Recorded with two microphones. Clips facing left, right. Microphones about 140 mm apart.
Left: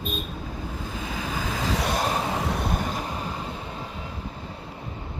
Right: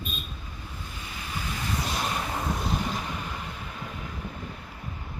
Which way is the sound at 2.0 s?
40° left (ahead or behind).